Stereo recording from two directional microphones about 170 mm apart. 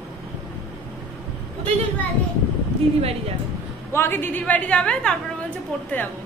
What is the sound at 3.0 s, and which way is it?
Speech, 35° right (ahead or behind).